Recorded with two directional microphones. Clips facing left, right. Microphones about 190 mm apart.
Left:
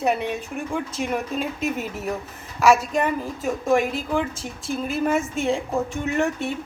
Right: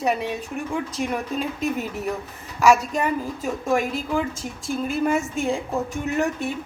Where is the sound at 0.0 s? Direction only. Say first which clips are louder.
Left 1 dB; centre (ahead or behind).